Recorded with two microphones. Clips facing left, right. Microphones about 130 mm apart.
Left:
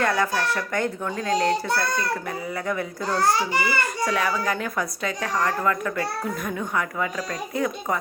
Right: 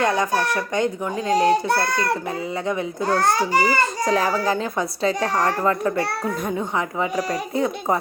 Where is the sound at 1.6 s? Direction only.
60° right (ahead or behind).